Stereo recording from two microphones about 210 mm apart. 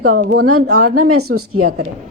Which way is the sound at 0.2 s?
50° right (ahead or behind).